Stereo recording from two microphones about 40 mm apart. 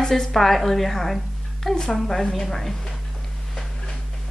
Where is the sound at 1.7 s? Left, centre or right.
Centre.